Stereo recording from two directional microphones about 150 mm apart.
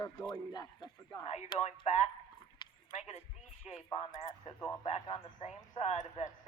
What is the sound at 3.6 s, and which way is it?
Speech, 40° left (ahead or behind).